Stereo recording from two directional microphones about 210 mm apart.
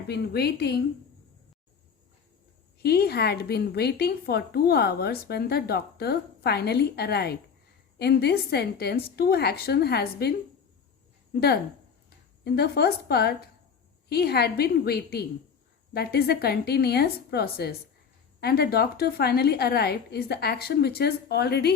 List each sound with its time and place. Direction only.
0.1 s a woman's voice: 50° left (ahead or behind)
2.8 s a woman's voice: 50° left (ahead or behind)
11.3 s a woman's voice: 50° left (ahead or behind)